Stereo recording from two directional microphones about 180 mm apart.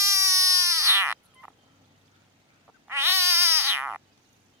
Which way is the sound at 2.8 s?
15° right (ahead or behind).